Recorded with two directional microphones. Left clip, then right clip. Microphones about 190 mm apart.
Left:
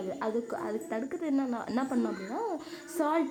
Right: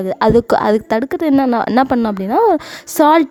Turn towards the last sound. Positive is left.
turn(degrees=-65)  # may be behind; listen again after turning